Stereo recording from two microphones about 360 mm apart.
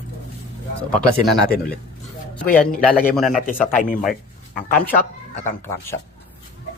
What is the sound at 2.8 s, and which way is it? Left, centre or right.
Speech, centre.